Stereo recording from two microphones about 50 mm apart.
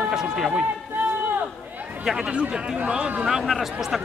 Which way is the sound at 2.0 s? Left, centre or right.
Centre.